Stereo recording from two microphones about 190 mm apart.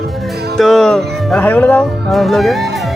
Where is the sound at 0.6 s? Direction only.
Centre (ahead or behind).